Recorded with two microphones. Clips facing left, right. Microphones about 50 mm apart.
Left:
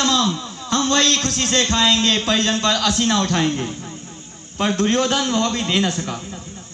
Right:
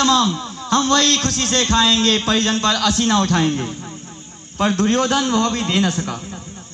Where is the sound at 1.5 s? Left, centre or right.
Right.